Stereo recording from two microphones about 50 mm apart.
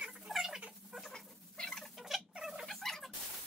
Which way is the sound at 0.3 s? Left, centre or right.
Centre.